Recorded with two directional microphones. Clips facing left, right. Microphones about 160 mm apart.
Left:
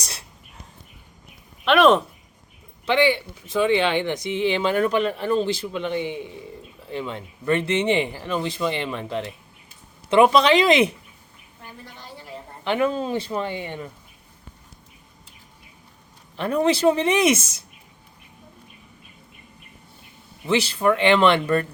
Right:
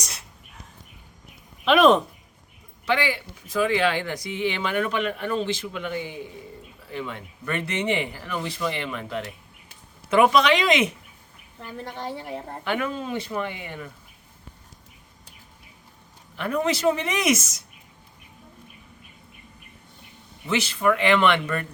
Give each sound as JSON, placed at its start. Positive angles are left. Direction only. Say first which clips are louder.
{"t": 0.0, "sound": "whispering", "louder": "left 1 dB", "side_deg": 35}
{"t": 1.6, "sound": "speech", "louder": "left 1 dB", "side_deg": 0}
{"t": 2.8, "sound": "speech", "louder": "left 5 dB", "side_deg": 25}
{"t": 11.6, "sound": "a woman's voice", "louder": "right 9 dB", "side_deg": -60}
{"t": 12.6, "sound": "speech", "louder": "left 6 dB", "side_deg": 25}
{"t": 16.4, "sound": "speech", "louder": "left 4 dB", "side_deg": 30}
{"t": 20.5, "sound": "speech", "louder": "left 3 dB", "side_deg": 35}